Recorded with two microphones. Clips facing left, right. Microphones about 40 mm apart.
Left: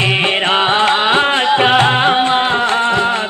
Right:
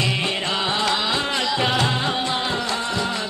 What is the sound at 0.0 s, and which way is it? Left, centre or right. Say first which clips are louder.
Music: left 9 dB; left.